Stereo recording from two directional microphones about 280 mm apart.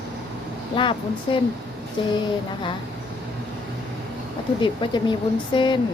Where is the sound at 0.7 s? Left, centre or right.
Centre.